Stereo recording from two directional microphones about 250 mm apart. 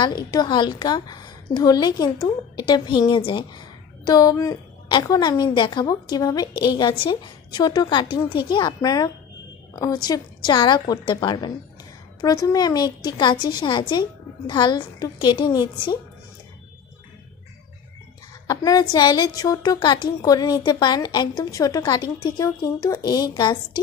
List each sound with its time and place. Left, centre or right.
0.0 s a woman's voice: centre
18.5 s a woman's voice: centre